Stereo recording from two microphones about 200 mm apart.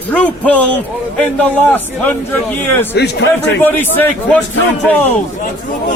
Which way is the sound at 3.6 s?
10° left (ahead or behind).